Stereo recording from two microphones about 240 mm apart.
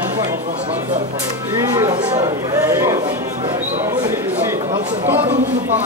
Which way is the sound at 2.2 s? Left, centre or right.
Centre.